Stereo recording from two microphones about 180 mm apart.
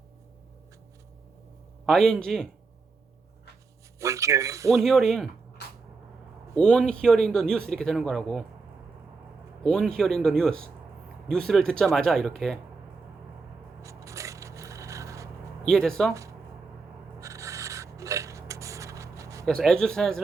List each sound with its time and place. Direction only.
1.9 s speech: 5° left (ahead or behind)
4.0 s speech: 15° right (ahead or behind)
4.7 s speech: centre (ahead or behind)
6.6 s speech: 5° left (ahead or behind)
9.6 s speech: 5° left (ahead or behind)
13.8 s scrape: 15° right (ahead or behind)
15.6 s speech: 5° left (ahead or behind)
17.2 s filing: 15° right (ahead or behind)
19.5 s speech: 5° left (ahead or behind)